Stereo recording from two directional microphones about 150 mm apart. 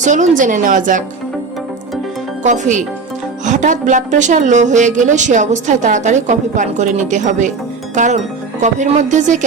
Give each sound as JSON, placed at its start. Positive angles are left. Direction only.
{"t": 0.0, "sound": "a woman's voice", "side_deg": -55}
{"t": 2.4, "sound": "a woman's voice", "side_deg": -55}